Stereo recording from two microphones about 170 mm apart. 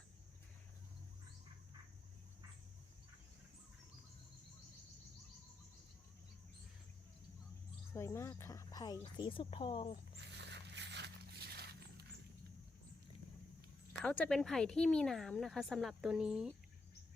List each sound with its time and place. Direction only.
7.9 s speech: 15° left (ahead or behind)
10.2 s a sound: 90° right; by 12.0 s 70° right (ahead or behind)
14.0 s a woman's voice: 5° left (ahead or behind)